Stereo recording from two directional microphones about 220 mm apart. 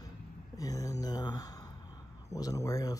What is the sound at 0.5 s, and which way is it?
Speech, 15° left (ahead or behind).